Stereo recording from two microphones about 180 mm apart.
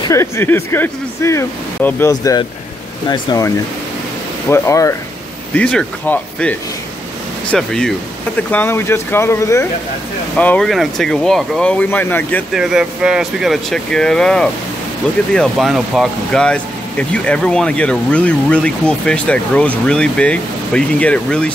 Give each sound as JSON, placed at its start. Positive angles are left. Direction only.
{"t": 0.1, "sound": "speech", "side_deg": 15}
{"t": 7.5, "sound": "speech", "side_deg": 5}
{"t": 12.5, "sound": "speech", "side_deg": -5}